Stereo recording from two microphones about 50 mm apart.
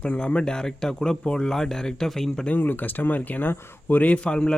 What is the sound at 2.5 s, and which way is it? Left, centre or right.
Speech, left.